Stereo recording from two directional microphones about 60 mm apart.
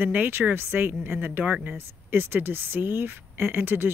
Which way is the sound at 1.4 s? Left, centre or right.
Right.